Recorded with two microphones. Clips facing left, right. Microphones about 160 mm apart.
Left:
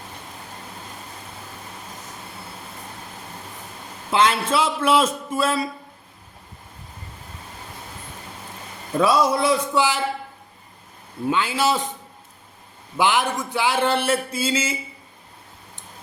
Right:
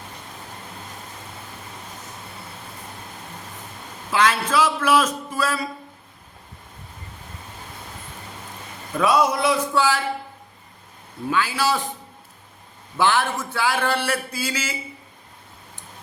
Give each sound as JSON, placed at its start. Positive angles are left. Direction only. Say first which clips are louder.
{"t": 4.1, "sound": "speech", "louder": "left 1 dB", "side_deg": 25}
{"t": 9.0, "sound": "speech", "louder": "left 1 dB", "side_deg": 30}
{"t": 11.3, "sound": "speech", "louder": "left 1 dB", "side_deg": 25}
{"t": 13.0, "sound": "speech", "louder": "even", "side_deg": 15}